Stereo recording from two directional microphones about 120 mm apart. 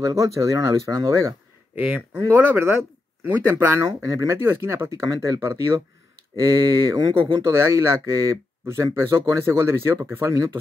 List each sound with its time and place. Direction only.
0.0 s speech: 25° right (ahead or behind)
2.1 s speech: 15° right (ahead or behind)